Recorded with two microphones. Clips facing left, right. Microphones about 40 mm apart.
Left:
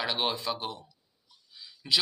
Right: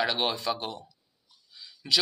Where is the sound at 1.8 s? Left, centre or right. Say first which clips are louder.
Right 1 dB; centre.